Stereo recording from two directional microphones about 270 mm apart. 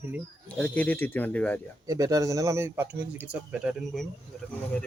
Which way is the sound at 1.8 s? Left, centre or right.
Centre.